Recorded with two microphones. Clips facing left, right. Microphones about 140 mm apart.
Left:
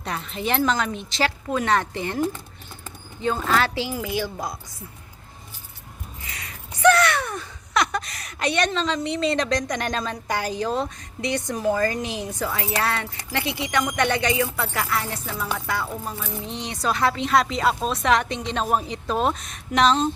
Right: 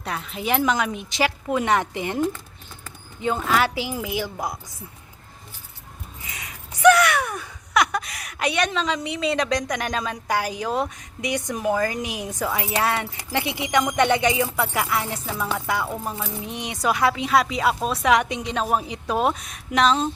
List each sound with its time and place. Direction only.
0.0 s speech: 5° right (ahead or behind)
6.2 s a sound: 20° right (ahead or behind)
12.0 s speech: 10° right (ahead or behind)